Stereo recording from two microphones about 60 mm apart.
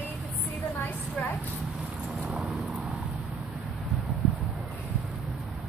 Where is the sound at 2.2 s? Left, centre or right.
Centre.